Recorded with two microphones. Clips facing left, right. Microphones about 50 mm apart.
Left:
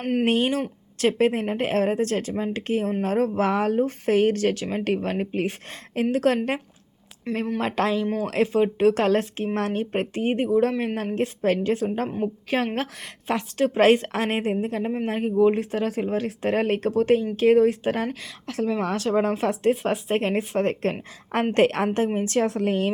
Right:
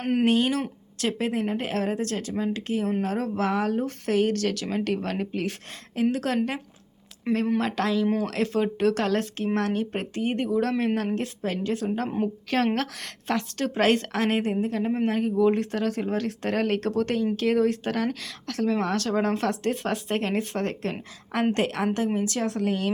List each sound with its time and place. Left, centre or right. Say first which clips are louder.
0.0 s speech: even; centre
0.3 s a woman's voice: left 1 dB; left
3.8 s a woman's voice: left 4 dB; left
7.3 s speech: right 2 dB; centre
7.6 s speech: left 1 dB; left
11.4 s a woman's voice: left 8 dB; left
12.2 s speech: right 2 dB; centre
13.3 s speech: left 4 dB; left
21.5 s a woman's voice: left 5 dB; left